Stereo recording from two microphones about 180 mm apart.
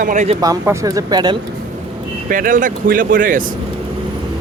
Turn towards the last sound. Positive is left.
turn(degrees=-50)  # may be behind; listen again after turning